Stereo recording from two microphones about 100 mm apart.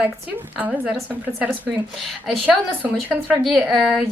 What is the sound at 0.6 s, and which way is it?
Speech, 15° right (ahead or behind).